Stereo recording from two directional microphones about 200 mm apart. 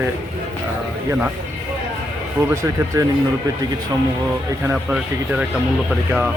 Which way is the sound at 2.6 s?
15° right (ahead or behind).